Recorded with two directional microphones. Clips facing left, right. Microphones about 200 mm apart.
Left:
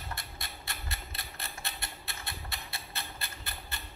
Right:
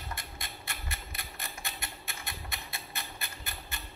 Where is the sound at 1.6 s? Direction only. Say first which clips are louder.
Even; 15° right (ahead or behind).